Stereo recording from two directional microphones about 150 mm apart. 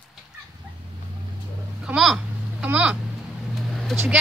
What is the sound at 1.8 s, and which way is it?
Vehicle, 5° right (ahead or behind).